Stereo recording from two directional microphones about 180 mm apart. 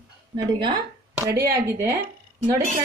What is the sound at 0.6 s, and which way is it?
Speech, 25° right (ahead or behind).